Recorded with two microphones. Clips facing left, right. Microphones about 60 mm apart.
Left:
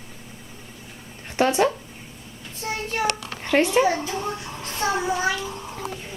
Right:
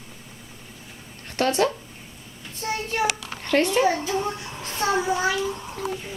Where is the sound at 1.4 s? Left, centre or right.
Centre.